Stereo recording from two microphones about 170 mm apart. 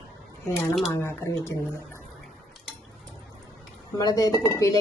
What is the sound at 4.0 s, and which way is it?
Speech, 20° left (ahead or behind).